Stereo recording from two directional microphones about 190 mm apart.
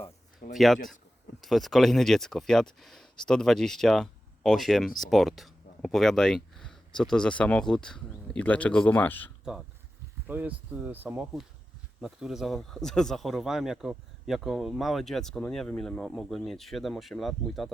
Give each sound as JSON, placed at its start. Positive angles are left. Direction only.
{"t": 0.5, "sound": "speech", "side_deg": 0}
{"t": 9.4, "sound": "speech", "side_deg": -5}